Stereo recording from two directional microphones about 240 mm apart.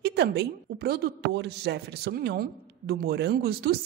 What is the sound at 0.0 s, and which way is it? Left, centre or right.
A man's voice, right.